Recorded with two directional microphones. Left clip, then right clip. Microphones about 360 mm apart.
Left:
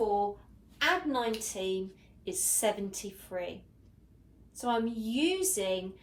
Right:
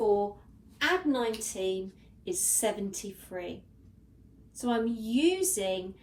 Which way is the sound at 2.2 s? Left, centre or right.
Centre.